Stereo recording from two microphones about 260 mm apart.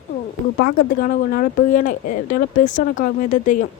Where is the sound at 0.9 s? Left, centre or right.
Left.